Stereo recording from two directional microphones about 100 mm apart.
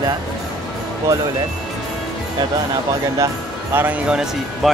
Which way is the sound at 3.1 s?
30° right (ahead or behind).